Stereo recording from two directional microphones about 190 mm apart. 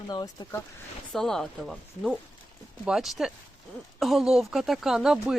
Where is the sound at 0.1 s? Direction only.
20° left (ahead or behind).